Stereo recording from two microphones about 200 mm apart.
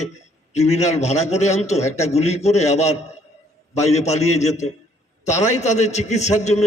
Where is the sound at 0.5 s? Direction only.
35° left (ahead or behind).